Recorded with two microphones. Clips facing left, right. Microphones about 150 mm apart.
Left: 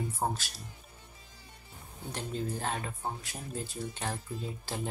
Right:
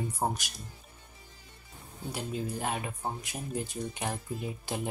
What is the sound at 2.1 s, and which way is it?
Speech, 10° right (ahead or behind).